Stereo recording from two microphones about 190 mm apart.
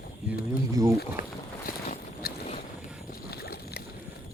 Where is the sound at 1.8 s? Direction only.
40° left (ahead or behind).